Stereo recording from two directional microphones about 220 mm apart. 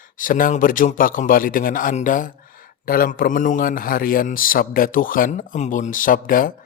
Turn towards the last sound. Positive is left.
turn(degrees=40)  # may be behind; listen again after turning